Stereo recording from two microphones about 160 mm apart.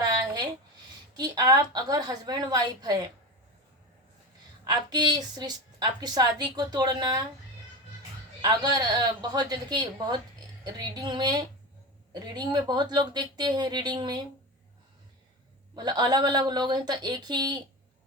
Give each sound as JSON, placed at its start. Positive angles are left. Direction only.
{"t": 0.1, "sound": "a sound", "side_deg": -25}
{"t": 1.1, "sound": "a woman's voice", "side_deg": -25}
{"t": 4.6, "sound": "a woman's voice", "side_deg": -25}
{"t": 8.4, "sound": "a woman's voice", "side_deg": -25}
{"t": 15.7, "sound": "a woman's voice", "side_deg": -25}